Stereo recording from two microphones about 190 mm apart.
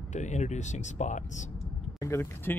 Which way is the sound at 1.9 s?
15° left (ahead or behind).